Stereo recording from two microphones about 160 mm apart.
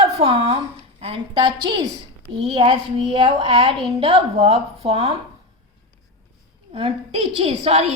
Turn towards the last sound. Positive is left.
turn(degrees=-40)  # may be behind; listen again after turning